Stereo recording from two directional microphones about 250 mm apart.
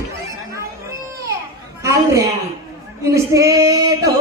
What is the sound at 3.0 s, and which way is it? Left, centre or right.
Female singing, centre.